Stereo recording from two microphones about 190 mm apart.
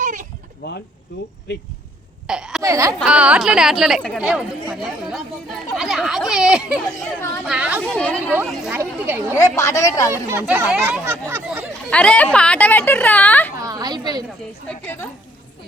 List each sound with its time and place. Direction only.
0.0 s goat: 40° right (ahead or behind)
2.2 s speech: 5° right (ahead or behind)
2.6 s speech: 15° right (ahead or behind)
3.0 s speech: 5° right (ahead or behind)
7.9 s speech: 5° left (ahead or behind); by 9.2 s 10° right (ahead or behind)
9.3 s speech: 15° left (ahead or behind)
10.1 s speech: 15° right (ahead or behind)
11.9 s speech: 5° left (ahead or behind)
13.6 s a woman's voice: 20° right (ahead or behind)
14.7 s speech: 10° left (ahead or behind)